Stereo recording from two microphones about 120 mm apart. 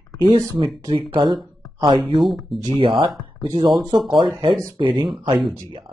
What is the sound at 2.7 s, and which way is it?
Speech, 45° right (ahead or behind).